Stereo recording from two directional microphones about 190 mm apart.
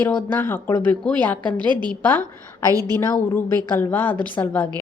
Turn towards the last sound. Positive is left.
turn(degrees=10)  # may be behind; listen again after turning